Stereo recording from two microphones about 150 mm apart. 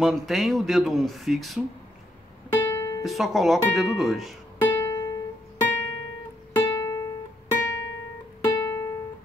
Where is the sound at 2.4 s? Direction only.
20° left (ahead or behind).